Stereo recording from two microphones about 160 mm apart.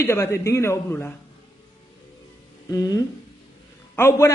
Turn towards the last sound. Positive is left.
turn(degrees=15)  # may be behind; listen again after turning